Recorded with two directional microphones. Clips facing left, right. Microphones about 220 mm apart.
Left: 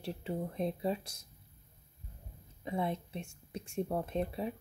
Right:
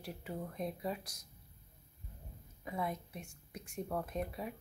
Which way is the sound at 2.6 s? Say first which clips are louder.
Left 4 dB; 25° left (ahead or behind).